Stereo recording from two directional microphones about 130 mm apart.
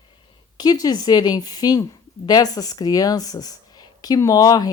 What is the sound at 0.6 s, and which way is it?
Speech, 30° left (ahead or behind).